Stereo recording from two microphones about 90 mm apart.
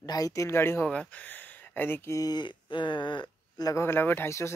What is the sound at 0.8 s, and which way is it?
Speech, 15° left (ahead or behind).